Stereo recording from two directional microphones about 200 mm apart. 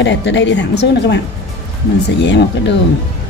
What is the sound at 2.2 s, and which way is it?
Speech, 60° left (ahead or behind).